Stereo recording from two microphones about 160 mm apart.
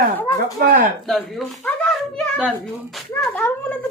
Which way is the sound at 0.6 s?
65° right (ahead or behind).